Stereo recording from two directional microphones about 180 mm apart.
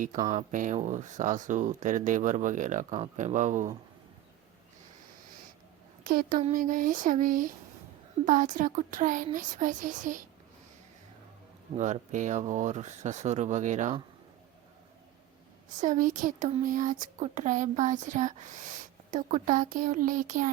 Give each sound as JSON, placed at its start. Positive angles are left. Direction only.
{"t": 0.3, "sound": "speech", "side_deg": -45}
{"t": 6.1, "sound": "a sound", "side_deg": -55}
{"t": 6.4, "sound": "speech", "side_deg": -45}
{"t": 11.8, "sound": "speech", "side_deg": -45}
{"t": 15.8, "sound": "speech", "side_deg": -45}